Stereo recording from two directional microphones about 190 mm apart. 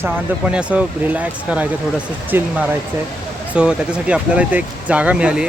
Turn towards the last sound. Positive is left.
turn(degrees=-5)  # may be behind; listen again after turning